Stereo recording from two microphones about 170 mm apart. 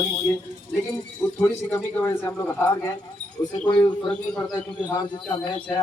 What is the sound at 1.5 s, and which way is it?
A man's voice, 10° left (ahead or behind).